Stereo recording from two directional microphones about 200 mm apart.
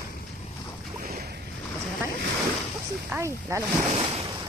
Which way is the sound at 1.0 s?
50° right (ahead or behind).